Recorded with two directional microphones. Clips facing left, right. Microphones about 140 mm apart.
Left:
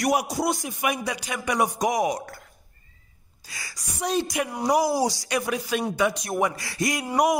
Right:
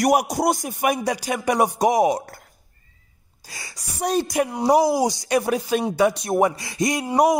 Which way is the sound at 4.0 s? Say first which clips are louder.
Right 4 dB; 45° right (ahead or behind).